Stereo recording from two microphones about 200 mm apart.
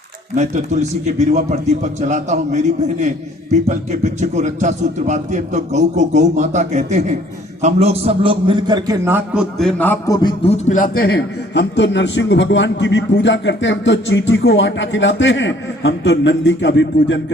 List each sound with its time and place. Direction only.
0.3 s a man's voice: 35° right (ahead or behind); by 10.2 s 10° left (ahead or behind)
10.2 s a man's voice: 25° left (ahead or behind); by 17.3 s 65° left (ahead or behind)